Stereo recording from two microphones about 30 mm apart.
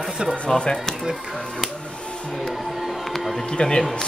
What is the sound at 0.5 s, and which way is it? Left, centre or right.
Speech, left.